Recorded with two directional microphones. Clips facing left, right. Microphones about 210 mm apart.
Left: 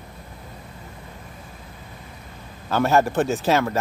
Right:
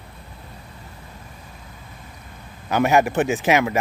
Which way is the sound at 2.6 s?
15° right (ahead or behind).